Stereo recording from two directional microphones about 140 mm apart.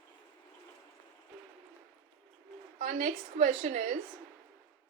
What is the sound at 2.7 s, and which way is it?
A woman's voice, 65° right (ahead or behind).